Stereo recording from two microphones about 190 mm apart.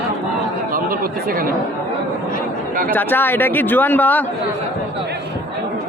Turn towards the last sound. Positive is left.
turn(degrees=10)  # may be behind; listen again after turning